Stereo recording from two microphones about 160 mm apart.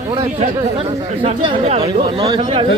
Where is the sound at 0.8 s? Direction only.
40° right (ahead or behind).